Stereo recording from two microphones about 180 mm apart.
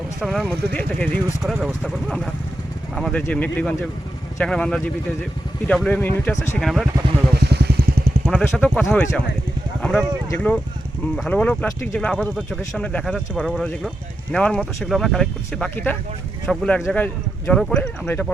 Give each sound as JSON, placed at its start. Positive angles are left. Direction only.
{"t": 0.2, "sound": "speech", "side_deg": 0}
{"t": 1.5, "sound": "speech", "side_deg": -5}
{"t": 6.6, "sound": "speech", "side_deg": 0}
{"t": 7.3, "sound": "vehicle", "side_deg": -65}
{"t": 8.3, "sound": "speech", "side_deg": 5}